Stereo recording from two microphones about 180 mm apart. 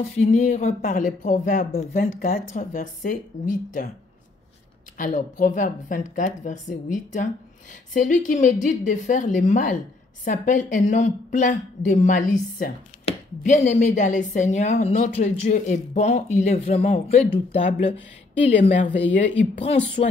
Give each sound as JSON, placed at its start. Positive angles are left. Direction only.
{"t": 0.2, "sound": "a woman's voice", "side_deg": 40}
{"t": 4.9, "sound": "a woman's voice", "side_deg": 45}